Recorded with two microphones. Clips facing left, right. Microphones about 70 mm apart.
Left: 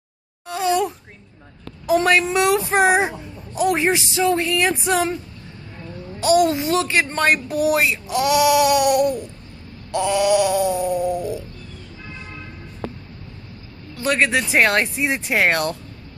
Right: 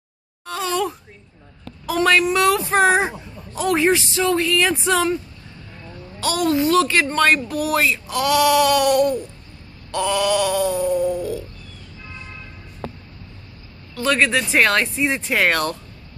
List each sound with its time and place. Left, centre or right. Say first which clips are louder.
0.5 s sigh: left 3 dB; centre
2.0 s speech: right 1 dB; left
6.2 s speech: left 2 dB; centre
14.0 s speech: even; centre